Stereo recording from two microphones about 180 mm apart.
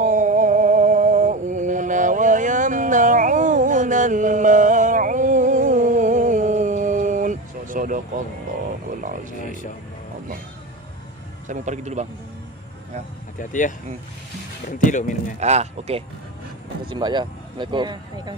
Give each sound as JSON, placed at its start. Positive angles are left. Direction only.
{"t": 0.0, "sound": "a sound", "side_deg": -45}
{"t": 9.4, "sound": "speech", "side_deg": 45}
{"t": 11.4, "sound": "speech", "side_deg": -40}
{"t": 13.4, "sound": "speech", "side_deg": 45}
{"t": 14.9, "sound": "speech", "side_deg": 45}
{"t": 15.4, "sound": "speech", "side_deg": -40}
{"t": 16.9, "sound": "speech", "side_deg": -25}